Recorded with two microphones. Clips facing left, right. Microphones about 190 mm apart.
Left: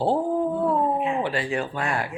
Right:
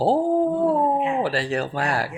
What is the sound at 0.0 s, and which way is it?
Dog, 35° right (ahead or behind).